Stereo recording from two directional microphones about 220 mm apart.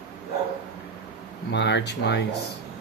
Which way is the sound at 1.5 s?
50° left (ahead or behind).